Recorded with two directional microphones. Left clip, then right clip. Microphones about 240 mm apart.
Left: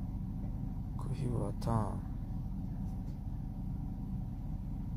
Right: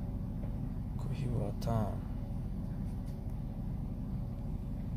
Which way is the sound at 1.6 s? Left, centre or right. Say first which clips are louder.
Even; centre.